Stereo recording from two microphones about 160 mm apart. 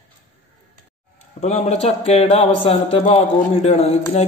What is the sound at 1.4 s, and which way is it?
A man's voice, 40° left (ahead or behind).